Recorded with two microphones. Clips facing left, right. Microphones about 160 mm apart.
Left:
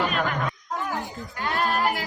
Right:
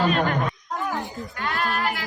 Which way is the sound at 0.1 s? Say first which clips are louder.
Right 4 dB; 40° right (ahead or behind).